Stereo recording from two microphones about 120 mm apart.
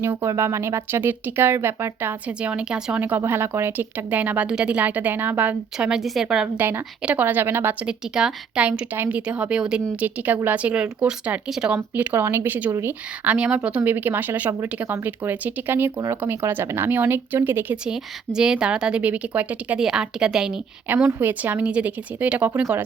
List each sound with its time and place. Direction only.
0.0 s a woman's voice: 20° right (ahead or behind); by 6.5 s 5° right (ahead or behind)
6.6 s speech: 15° right (ahead or behind)
11.8 s speech: 15° right (ahead or behind)